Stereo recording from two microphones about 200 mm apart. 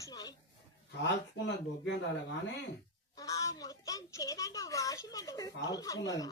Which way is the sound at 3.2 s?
15° left (ahead or behind).